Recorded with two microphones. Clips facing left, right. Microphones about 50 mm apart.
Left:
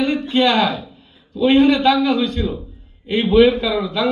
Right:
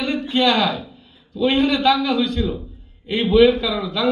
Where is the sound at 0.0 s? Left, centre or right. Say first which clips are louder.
Left 4 dB; left.